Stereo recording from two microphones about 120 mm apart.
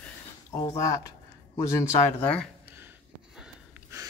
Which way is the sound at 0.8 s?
25° left (ahead or behind).